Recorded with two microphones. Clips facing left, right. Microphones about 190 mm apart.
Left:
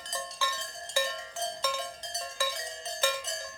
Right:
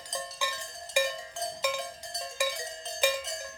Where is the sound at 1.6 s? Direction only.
15° right (ahead or behind).